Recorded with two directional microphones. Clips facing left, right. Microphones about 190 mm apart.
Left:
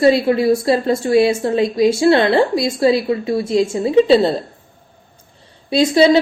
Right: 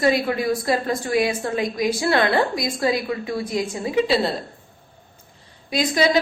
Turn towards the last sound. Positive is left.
turn(degrees=30)  # may be behind; listen again after turning